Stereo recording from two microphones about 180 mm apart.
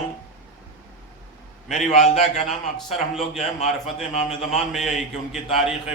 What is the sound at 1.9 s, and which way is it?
Speech, 40° left (ahead or behind).